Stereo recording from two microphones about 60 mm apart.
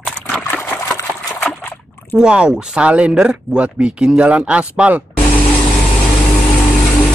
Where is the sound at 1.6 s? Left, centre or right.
Left.